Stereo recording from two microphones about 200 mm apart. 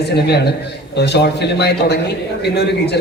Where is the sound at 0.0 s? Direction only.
55° left (ahead or behind).